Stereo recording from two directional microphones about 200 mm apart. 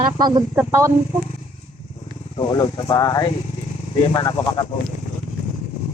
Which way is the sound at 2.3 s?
20° left (ahead or behind).